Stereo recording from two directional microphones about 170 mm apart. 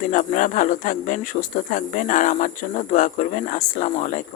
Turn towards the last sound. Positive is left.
turn(degrees=45)  # may be behind; listen again after turning